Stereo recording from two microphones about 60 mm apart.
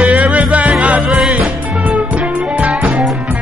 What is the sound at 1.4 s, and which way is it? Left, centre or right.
Music, right.